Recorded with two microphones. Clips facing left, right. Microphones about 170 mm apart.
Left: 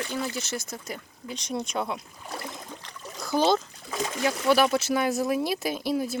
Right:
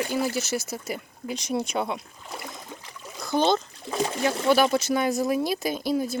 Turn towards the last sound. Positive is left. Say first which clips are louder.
# right 2 dB
turn(degrees=0)  # may be behind; listen again after turning